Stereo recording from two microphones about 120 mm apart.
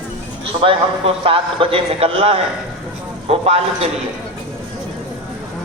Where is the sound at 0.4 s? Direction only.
50° right (ahead or behind).